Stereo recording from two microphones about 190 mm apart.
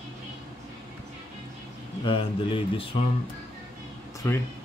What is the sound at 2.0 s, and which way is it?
Mantra, 25° left (ahead or behind).